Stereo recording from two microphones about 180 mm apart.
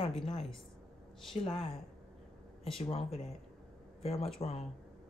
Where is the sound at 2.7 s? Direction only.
30° left (ahead or behind).